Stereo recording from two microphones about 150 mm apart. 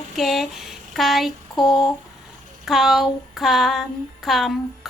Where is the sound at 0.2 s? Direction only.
Centre (ahead or behind).